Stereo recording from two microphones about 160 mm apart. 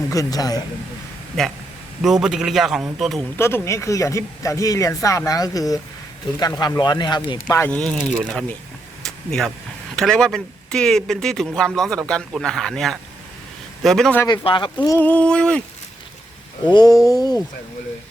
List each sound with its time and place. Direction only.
0.1 s speech: 20° left (ahead or behind)
1.4 s speech: 5° left (ahead or behind)
3.3 s speech: 15° left (ahead or behind)
7.7 s speech: 5° left (ahead or behind)
9.0 s a sound: 5° left (ahead or behind)
9.9 s speech: 5° left (ahead or behind)
14.4 s speech: 30° left (ahead or behind)
14.9 s speech: 10° left (ahead or behind)
16.6 s speech: 25° left (ahead or behind)